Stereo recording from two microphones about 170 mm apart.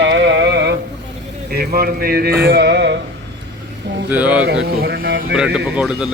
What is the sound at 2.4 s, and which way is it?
Music, 75° right (ahead or behind).